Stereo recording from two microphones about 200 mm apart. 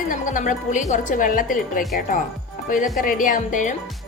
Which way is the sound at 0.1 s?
40° left (ahead or behind).